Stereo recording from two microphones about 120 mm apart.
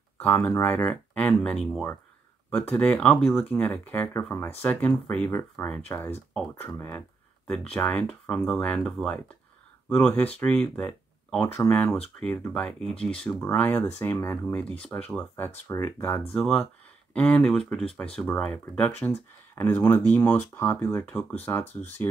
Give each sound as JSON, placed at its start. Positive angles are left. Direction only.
{"t": 0.2, "sound": "speech", "side_deg": 15}
{"t": 7.7, "sound": "speech", "side_deg": 15}
{"t": 11.4, "sound": "speech", "side_deg": 20}
{"t": 16.3, "sound": "speech", "side_deg": 5}